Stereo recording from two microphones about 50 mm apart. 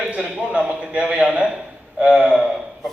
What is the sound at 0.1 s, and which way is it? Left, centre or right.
A man's voice, right.